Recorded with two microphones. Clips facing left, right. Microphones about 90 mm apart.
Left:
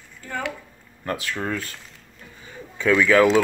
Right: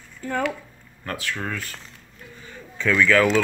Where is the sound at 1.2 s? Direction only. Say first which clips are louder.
Even; 20° left (ahead or behind).